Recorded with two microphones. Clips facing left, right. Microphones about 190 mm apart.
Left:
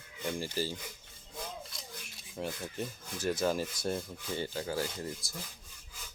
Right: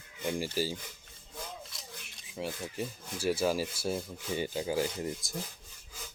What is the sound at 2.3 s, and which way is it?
Rub, 5° right (ahead or behind).